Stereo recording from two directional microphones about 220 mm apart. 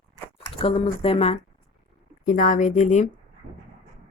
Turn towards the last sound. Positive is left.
turn(degrees=35)  # may be behind; listen again after turning